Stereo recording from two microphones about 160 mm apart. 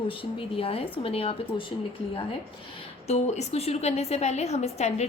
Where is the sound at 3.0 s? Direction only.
45° left (ahead or behind).